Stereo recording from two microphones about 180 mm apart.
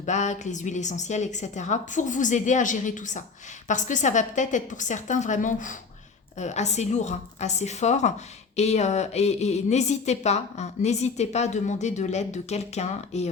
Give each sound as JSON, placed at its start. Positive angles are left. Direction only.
{"t": 0.0, "sound": "a woman's voice", "side_deg": 40}